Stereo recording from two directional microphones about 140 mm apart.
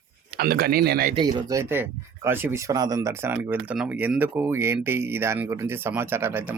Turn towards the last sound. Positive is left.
turn(degrees=-15)  # may be behind; listen again after turning